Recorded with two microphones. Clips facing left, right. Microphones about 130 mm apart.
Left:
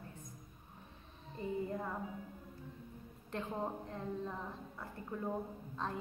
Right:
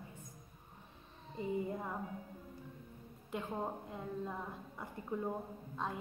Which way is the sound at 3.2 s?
5° right (ahead or behind).